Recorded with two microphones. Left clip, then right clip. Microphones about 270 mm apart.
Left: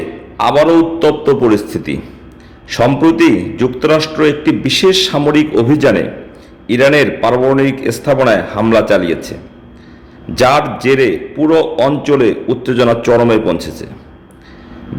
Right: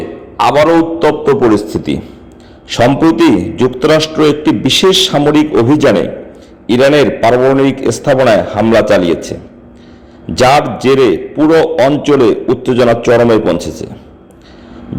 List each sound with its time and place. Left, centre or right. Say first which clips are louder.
0.3 s a man's voice: right 1 dB; centre
10.3 s a man's voice: right 2 dB; centre